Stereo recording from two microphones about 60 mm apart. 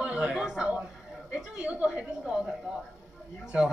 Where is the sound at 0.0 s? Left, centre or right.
Centre.